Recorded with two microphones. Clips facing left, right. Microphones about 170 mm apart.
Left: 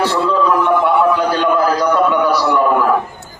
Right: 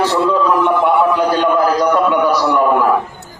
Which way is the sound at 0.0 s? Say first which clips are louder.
Right 1 dB; 15° right (ahead or behind).